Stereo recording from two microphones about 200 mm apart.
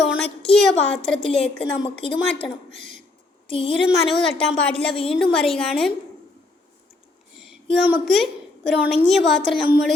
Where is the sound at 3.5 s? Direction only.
25° left (ahead or behind).